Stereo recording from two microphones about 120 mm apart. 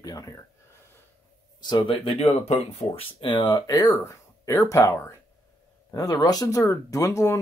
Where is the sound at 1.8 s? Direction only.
50° left (ahead or behind).